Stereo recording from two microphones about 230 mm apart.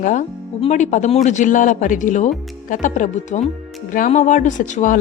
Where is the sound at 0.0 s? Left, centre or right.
Left.